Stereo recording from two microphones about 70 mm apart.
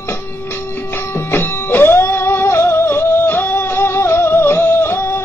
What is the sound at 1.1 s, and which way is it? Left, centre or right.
Music, left.